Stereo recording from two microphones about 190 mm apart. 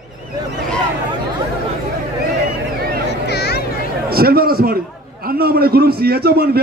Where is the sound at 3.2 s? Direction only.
60° left (ahead or behind).